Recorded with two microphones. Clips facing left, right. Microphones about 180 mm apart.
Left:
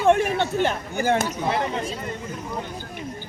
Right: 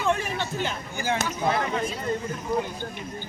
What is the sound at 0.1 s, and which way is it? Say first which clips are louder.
Speech: left 10 dB; 65° left (ahead or behind).